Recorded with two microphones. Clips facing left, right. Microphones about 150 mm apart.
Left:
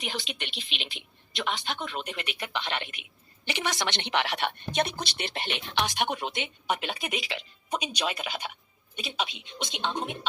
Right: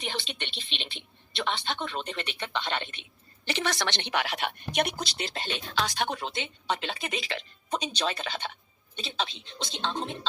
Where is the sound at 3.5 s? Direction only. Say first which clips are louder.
Right 1 dB; 15° left (ahead or behind).